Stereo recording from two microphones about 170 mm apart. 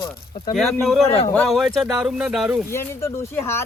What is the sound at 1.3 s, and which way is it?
Speech, centre (ahead or behind).